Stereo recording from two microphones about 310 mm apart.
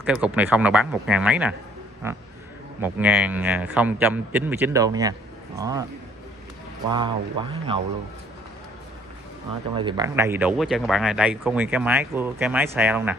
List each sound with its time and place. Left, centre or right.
0.0 s speech: centre
6.9 s speech: centre
9.8 s speech: centre